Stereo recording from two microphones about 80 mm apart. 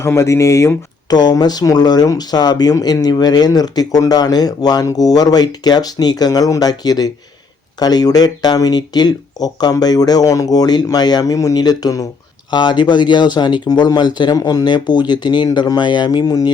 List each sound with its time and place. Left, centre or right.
0.0 s speech: left
1.1 s speech: left
12.5 s speech: left